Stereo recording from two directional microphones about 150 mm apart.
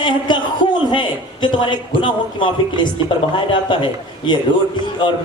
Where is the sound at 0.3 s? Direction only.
30° left (ahead or behind).